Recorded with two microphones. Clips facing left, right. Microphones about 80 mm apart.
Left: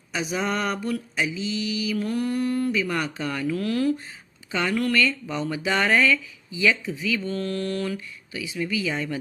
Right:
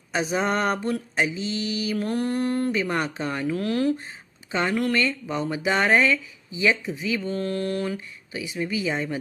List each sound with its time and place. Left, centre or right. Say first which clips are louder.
0.1 s mantra: right 3 dB; right
4.5 s speech: even; right